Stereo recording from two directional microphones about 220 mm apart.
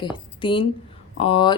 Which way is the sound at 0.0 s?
20° left (ahead or behind).